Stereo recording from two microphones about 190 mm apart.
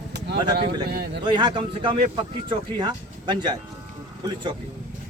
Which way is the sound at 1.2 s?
25° right (ahead or behind).